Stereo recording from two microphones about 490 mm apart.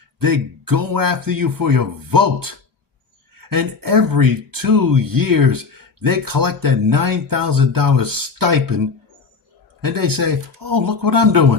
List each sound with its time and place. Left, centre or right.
0.2 s speech: right